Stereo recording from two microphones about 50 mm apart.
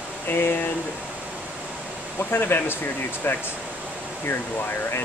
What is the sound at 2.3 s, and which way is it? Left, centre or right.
Speech, left.